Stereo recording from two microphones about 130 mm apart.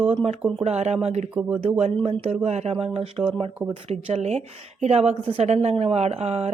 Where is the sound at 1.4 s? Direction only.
15° right (ahead or behind).